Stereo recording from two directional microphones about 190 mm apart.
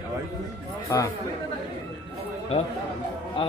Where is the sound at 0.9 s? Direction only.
15° left (ahead or behind).